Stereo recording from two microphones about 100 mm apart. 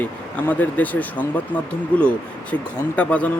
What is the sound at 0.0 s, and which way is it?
Speech, 15° left (ahead or behind).